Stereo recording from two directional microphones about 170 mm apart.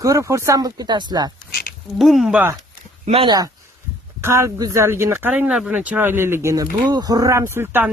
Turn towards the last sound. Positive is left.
turn(degrees=-10)  # may be behind; listen again after turning